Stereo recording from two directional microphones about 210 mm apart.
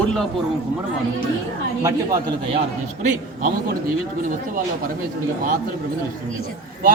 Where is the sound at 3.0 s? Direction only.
40° right (ahead or behind).